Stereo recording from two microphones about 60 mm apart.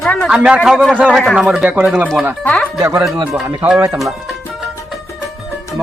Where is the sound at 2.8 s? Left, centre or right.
Right.